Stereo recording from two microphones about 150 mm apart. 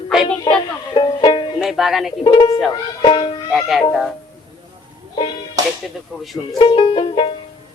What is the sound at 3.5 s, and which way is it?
Speech, centre (ahead or behind).